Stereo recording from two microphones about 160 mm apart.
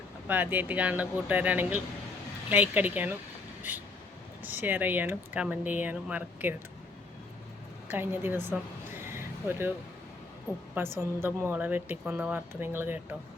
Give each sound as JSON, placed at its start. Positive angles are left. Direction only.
{"t": 0.3, "sound": "speech", "side_deg": -10}
{"t": 7.9, "sound": "speech", "side_deg": -15}
{"t": 10.5, "sound": "a woman's voice", "side_deg": 20}
{"t": 11.2, "sound": "speech", "side_deg": -15}